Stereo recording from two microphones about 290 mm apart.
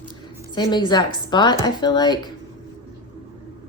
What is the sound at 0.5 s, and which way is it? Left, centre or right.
Speech, centre.